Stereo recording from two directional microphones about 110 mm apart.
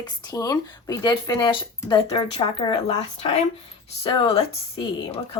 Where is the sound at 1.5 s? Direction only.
50° left (ahead or behind).